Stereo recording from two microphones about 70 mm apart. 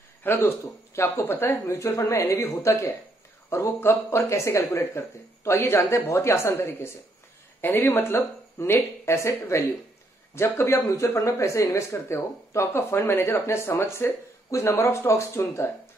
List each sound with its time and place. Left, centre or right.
0.2 s speech: left
0.9 s speech: left
1.2 s speech: left
1.7 s speech: left
10.8 s speech: left